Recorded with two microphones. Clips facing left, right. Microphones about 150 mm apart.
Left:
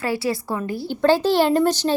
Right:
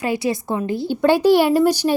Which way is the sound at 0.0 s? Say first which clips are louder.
Right 2 dB; 20° right (ahead or behind).